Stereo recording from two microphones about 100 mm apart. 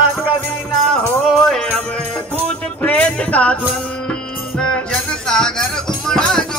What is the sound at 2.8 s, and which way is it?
Music, 10° left (ahead or behind).